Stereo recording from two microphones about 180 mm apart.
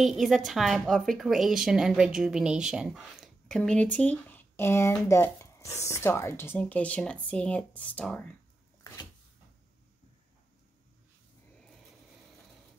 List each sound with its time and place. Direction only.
0.0 s a woman's voice: centre (ahead or behind)